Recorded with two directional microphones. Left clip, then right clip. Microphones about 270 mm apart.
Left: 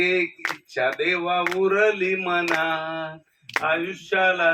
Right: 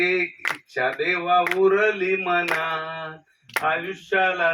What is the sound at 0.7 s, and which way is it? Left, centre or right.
Speech, left.